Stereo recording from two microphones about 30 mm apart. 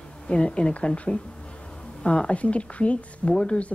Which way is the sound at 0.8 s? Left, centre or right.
Left.